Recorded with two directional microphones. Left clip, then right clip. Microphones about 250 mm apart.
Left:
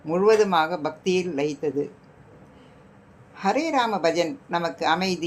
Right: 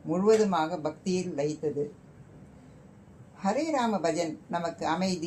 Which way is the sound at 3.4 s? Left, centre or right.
Left.